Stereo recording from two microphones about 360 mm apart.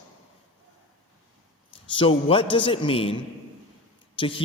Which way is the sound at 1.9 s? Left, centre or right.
Centre.